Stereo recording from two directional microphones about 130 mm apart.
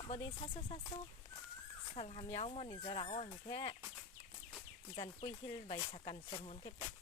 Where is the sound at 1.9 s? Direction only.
50° left (ahead or behind).